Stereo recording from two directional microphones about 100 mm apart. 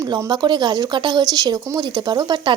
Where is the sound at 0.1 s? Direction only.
50° right (ahead or behind).